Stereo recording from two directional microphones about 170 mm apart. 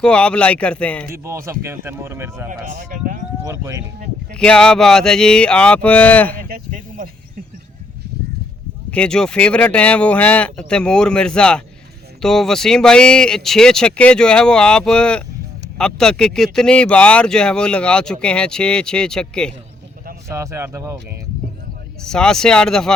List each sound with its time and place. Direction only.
0.0 s speech: 5° left (ahead or behind)
1.1 s speech: 15° right (ahead or behind)
2.5 s speech: 50° right (ahead or behind)
3.4 s speech: 20° right (ahead or behind)
4.4 s speech: 5° left (ahead or behind)
6.5 s a sound: 55° right (ahead or behind)
8.9 s speech: 5° left (ahead or behind)
20.2 s speech: 20° right (ahead or behind)
22.0 s speech: 5° left (ahead or behind)